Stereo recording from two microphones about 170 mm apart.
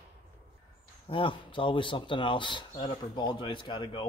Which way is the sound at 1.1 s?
30° left (ahead or behind).